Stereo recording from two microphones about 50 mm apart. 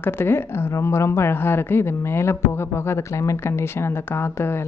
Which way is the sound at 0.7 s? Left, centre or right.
Left.